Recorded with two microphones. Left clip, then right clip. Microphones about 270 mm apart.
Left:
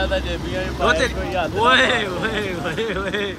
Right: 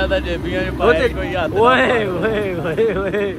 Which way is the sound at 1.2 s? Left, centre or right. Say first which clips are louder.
Right 2 dB; right.